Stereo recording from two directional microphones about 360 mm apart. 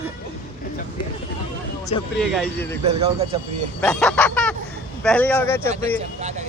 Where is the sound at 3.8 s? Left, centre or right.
Centre.